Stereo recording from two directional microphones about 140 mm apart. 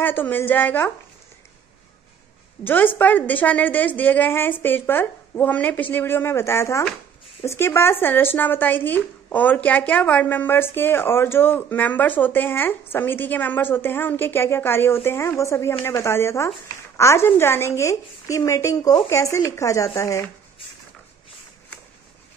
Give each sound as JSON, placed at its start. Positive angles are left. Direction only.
{"t": 0.0, "sound": "speech", "side_deg": 15}
{"t": 2.6, "sound": "a woman's voice", "side_deg": 15}